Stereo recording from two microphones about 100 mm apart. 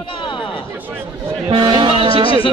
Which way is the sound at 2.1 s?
65° left (ahead or behind).